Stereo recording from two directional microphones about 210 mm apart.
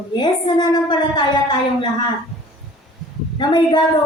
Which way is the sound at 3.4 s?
20° left (ahead or behind).